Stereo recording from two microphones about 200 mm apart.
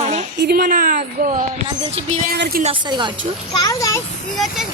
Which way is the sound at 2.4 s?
50° right (ahead or behind).